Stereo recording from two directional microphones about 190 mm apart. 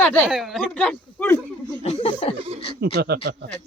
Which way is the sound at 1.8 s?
30° left (ahead or behind).